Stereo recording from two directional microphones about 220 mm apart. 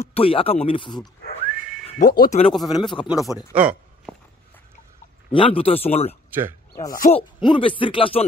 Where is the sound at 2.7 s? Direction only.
20° left (ahead or behind).